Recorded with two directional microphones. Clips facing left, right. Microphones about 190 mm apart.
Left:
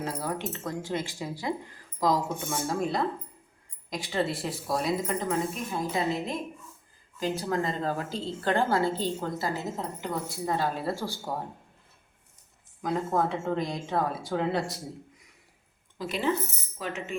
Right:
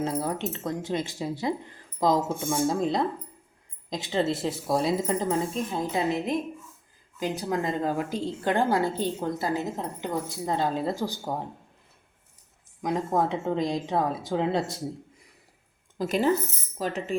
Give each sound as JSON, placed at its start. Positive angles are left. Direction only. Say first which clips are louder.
{"t": 0.0, "sound": "a woman's voice", "louder": "right 4 dB", "side_deg": -25}
{"t": 12.8, "sound": "a woman's voice", "louder": "right 2 dB", "side_deg": -15}
{"t": 16.0, "sound": "speech", "louder": "right 5 dB", "side_deg": -45}